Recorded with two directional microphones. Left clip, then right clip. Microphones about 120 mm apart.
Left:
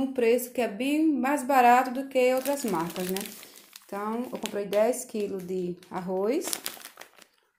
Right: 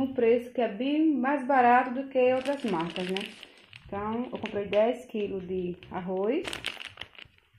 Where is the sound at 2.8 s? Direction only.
90° left.